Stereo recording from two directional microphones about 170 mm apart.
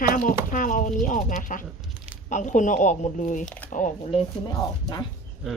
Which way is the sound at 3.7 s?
50° left (ahead or behind).